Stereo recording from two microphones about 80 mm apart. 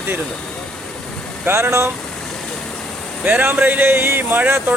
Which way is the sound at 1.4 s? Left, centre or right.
Right.